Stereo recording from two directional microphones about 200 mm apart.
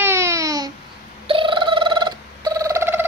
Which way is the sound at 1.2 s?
25° right (ahead or behind).